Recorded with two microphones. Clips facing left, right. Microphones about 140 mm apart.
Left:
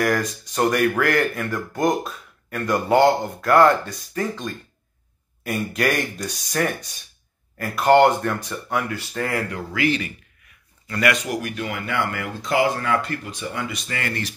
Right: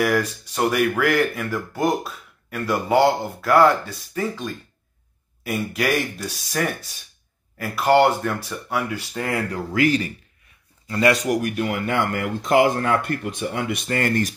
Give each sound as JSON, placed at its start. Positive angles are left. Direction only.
{"t": 0.0, "sound": "speech", "side_deg": -5}
{"t": 9.5, "sound": "speech", "side_deg": -40}
{"t": 10.9, "sound": "speech", "side_deg": -25}
{"t": 11.2, "sound": "speech", "side_deg": -50}